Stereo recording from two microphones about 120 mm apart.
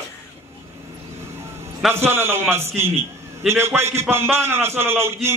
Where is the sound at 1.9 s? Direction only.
20° right (ahead or behind).